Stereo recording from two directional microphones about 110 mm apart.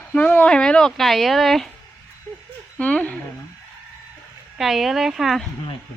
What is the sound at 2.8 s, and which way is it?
Speech, 15° left (ahead or behind).